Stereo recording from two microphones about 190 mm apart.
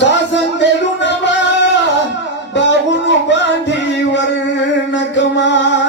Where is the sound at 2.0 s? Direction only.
70° left (ahead or behind).